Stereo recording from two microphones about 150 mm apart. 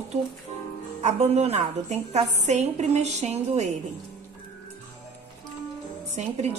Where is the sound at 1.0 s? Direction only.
50° right (ahead or behind).